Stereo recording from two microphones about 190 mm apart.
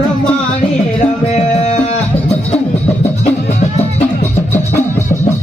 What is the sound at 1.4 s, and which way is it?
Music, 35° left (ahead or behind).